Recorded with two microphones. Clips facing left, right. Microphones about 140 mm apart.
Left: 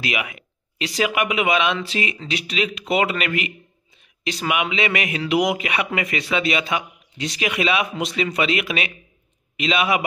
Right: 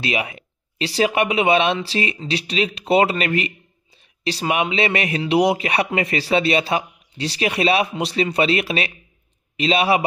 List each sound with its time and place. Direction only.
0.0 s a man's voice: 30° right (ahead or behind)